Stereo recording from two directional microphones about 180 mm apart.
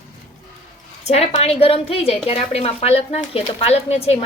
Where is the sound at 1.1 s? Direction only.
35° left (ahead or behind).